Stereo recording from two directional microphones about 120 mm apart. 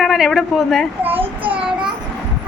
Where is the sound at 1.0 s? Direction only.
15° right (ahead or behind).